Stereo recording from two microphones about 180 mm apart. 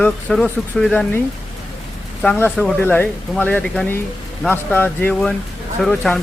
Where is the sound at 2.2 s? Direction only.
10° left (ahead or behind).